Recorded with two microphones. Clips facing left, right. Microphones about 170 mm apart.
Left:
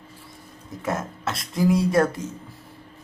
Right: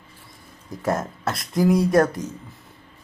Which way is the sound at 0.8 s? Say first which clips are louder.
Right 3 dB; 40° right (ahead or behind).